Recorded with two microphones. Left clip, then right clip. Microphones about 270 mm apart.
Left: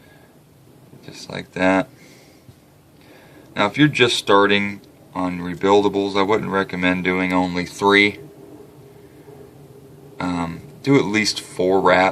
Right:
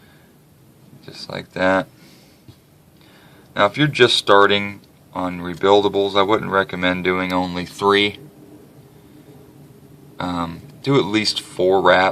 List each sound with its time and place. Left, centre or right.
1.3 s speech: right
3.5 s speech: right
10.2 s a sound: right
11.3 s speech: right